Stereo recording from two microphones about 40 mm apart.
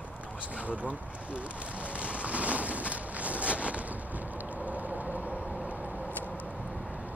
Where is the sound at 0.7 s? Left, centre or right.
Right.